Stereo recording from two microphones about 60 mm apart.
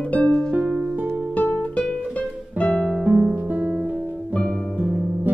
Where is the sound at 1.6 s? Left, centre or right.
Left.